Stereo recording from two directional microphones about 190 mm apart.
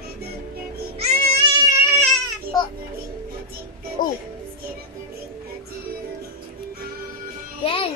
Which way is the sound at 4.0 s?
45° left (ahead or behind).